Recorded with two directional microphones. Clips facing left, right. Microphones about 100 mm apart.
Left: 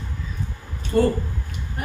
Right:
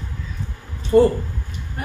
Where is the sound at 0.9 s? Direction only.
25° right (ahead or behind).